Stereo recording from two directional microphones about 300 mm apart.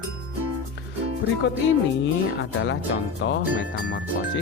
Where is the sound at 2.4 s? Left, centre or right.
Left.